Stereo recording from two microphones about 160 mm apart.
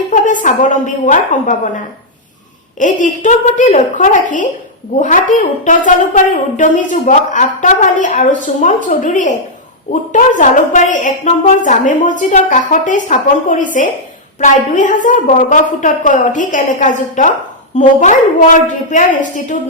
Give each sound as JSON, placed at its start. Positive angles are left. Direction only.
{"t": 0.1, "sound": "a woman's voice", "side_deg": 55}
{"t": 2.7, "sound": "a woman's voice", "side_deg": 55}